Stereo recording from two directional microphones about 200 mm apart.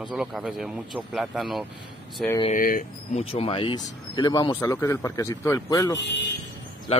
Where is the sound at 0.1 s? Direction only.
Centre (ahead or behind).